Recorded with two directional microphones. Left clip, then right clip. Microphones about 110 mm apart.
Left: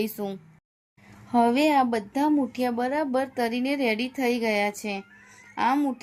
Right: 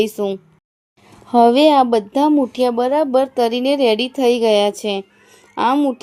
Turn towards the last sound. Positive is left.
turn(degrees=-45)  # may be behind; listen again after turning